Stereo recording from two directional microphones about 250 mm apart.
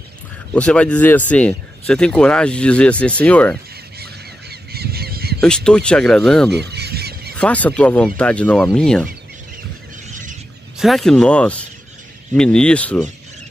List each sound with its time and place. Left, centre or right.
0.6 s speech: centre
4.0 s honk: right
5.4 s speech: centre
6.5 s goose: right
7.3 s speech: centre
10.8 s speech: centre